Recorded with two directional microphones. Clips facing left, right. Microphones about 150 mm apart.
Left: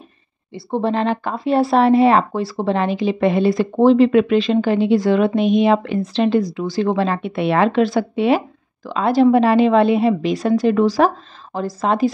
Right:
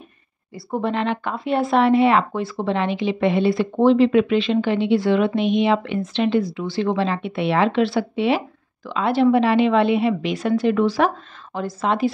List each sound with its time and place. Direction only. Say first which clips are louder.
0.5 s speech: left 4 dB; 25° left (ahead or behind)